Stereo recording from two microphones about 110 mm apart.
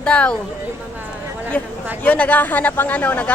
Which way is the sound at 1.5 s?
15° left (ahead or behind).